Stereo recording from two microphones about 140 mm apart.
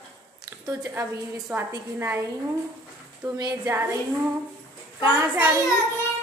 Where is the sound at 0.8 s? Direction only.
20° right (ahead or behind).